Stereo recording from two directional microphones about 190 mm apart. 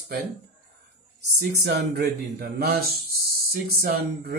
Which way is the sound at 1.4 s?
60° right (ahead or behind).